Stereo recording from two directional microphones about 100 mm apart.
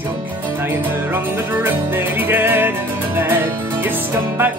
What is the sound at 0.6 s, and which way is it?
Music, 20° right (ahead or behind).